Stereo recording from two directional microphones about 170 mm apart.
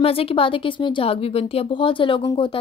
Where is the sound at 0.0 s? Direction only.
35° left (ahead or behind).